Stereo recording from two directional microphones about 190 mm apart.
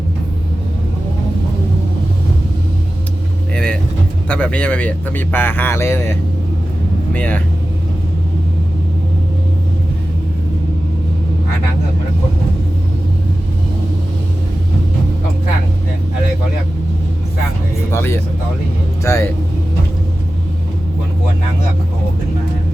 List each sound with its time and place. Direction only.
3.5 s vehicle: 5° left (ahead or behind)
4.3 s a man's voice: 5° left (ahead or behind)
17.9 s a man's voice: 15° left (ahead or behind)